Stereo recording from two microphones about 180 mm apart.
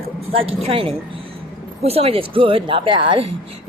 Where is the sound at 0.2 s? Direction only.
35° right (ahead or behind).